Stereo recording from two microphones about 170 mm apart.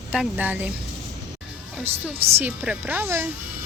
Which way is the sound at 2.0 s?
10° right (ahead or behind).